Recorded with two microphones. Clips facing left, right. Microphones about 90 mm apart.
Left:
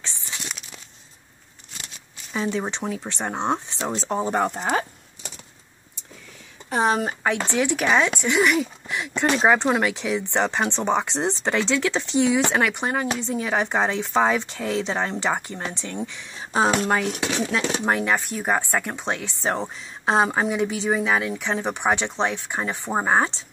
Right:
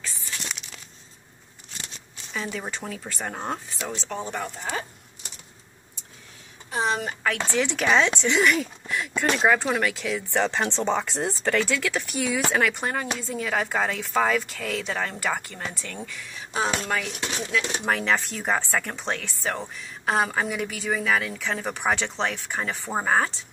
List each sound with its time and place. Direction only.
0.0 s crumpling: 25° left (ahead or behind)
2.3 s a woman's voice: 25° left (ahead or behind); by 4.8 s 55° left (ahead or behind)
6.7 s a woman's voice: 50° left (ahead or behind)
7.3 s a woman's voice: 15° left (ahead or behind)
17.8 s speech: 15° left (ahead or behind)
19.4 s a woman's voice: 30° left (ahead or behind)